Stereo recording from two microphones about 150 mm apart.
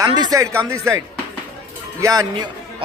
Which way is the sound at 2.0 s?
25° right (ahead or behind).